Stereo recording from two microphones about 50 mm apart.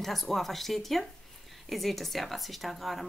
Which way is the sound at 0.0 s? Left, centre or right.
Centre.